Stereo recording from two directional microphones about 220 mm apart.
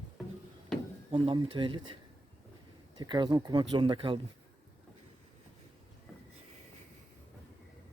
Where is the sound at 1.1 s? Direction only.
25° right (ahead or behind).